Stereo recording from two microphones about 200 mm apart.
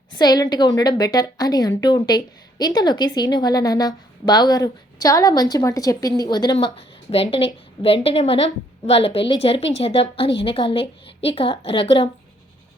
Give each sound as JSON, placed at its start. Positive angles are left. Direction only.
{"t": 0.1, "sound": "a woman's voice", "side_deg": 20}